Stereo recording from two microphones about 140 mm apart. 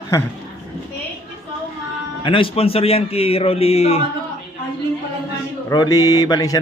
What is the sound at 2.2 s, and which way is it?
Speech, 40° left (ahead or behind).